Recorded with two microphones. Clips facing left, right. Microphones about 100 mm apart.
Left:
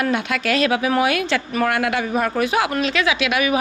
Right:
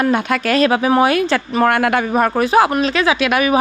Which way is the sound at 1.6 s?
50° right (ahead or behind).